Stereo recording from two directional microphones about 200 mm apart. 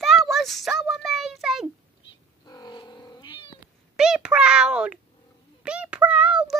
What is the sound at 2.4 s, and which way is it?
Cat, 20° left (ahead or behind).